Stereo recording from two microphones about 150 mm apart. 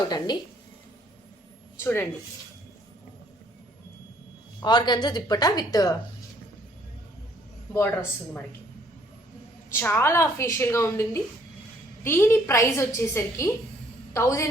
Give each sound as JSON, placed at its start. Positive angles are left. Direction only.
{"t": 0.0, "sound": "a woman's voice", "side_deg": 25}
{"t": 1.8, "sound": "a woman's voice", "side_deg": 15}
{"t": 4.6, "sound": "a woman's voice", "side_deg": 30}
{"t": 7.7, "sound": "a woman's voice", "side_deg": 15}
{"t": 9.7, "sound": "a woman's voice", "side_deg": 15}